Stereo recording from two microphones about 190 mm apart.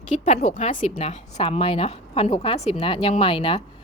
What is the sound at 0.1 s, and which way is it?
A woman's voice, 35° left (ahead or behind).